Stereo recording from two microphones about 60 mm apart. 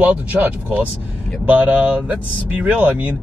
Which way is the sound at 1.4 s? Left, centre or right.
Right.